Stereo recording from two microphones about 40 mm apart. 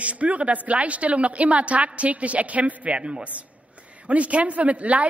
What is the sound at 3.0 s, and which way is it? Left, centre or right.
Speech, right.